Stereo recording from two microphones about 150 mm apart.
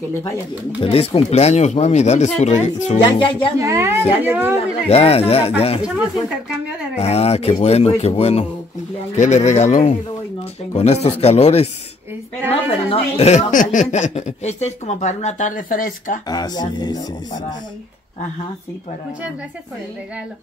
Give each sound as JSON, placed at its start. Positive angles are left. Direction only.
{"t": 0.7, "sound": "speech", "side_deg": 40}
{"t": 3.0, "sound": "speech", "side_deg": 35}
{"t": 3.5, "sound": "a woman's voice", "side_deg": -20}
{"t": 4.8, "sound": "speech", "side_deg": 40}
{"t": 7.0, "sound": "speech", "side_deg": 45}
{"t": 16.3, "sound": "speech", "side_deg": 25}